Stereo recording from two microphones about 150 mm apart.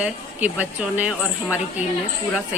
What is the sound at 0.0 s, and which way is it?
Speech, 10° right (ahead or behind).